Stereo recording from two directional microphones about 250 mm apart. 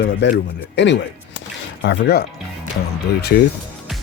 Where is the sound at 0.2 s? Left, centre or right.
Left.